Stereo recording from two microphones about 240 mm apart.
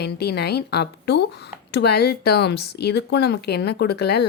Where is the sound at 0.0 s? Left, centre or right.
Left.